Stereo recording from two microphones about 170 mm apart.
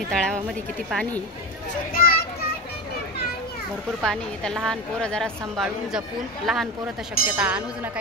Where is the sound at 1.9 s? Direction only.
60° left (ahead or behind).